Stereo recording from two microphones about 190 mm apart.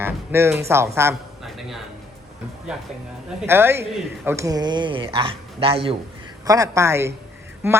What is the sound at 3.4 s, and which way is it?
Speech, 10° right (ahead or behind).